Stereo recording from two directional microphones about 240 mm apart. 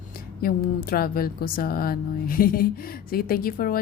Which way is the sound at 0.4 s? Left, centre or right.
Left.